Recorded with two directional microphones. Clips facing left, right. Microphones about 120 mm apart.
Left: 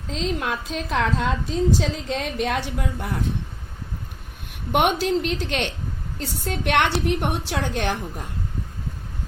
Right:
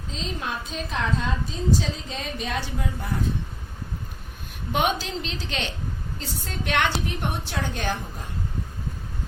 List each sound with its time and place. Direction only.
0.1 s a woman's voice: 85° left; by 3.1 s 65° left (ahead or behind)
4.7 s a woman's voice: 60° left (ahead or behind)